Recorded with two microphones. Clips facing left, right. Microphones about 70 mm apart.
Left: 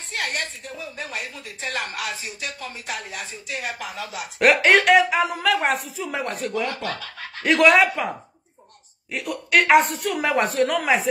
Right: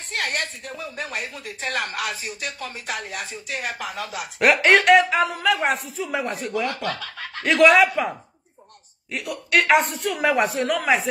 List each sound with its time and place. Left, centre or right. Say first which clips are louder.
0.1 s a sound: right 1 dB; right
0.9 s speech: right 2 dB; right
4.4 s speech: even; centre
9.1 s speech: left 1 dB; centre